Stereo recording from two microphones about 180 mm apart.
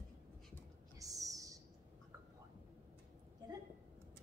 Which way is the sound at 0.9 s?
20° right (ahead or behind).